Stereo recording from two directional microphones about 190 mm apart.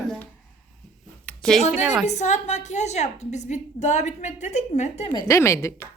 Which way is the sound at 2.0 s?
40° left (ahead or behind).